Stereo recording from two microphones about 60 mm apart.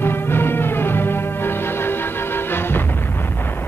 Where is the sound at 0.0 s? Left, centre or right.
Left.